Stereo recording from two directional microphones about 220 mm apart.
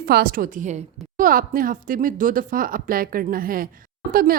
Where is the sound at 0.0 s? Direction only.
40° right (ahead or behind).